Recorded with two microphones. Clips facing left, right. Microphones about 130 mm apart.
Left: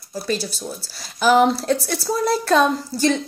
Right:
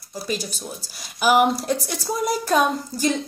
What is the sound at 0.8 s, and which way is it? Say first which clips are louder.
A woman's voice: left 2 dB; 15° right (ahead or behind).